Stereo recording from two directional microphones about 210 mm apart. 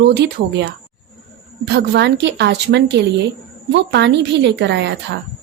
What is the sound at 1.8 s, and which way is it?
A woman's voice, 55° right (ahead or behind).